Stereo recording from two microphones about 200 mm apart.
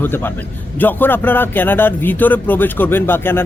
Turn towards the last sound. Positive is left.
turn(degrees=10)  # may be behind; listen again after turning